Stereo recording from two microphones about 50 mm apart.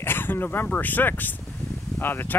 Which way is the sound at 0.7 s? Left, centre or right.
Left.